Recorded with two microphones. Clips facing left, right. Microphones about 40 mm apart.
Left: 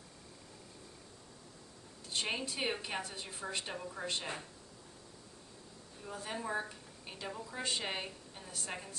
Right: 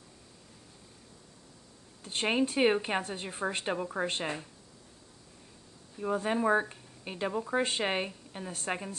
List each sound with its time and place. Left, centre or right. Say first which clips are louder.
2.0 s speech: right 8 dB; right
5.9 s speech: right 12 dB; right